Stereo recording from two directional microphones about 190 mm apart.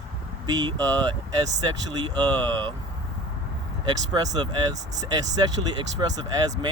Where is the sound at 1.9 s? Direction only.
20° right (ahead or behind).